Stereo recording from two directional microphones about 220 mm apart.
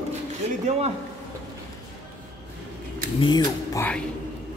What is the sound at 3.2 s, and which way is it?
Speech, 20° left (ahead or behind).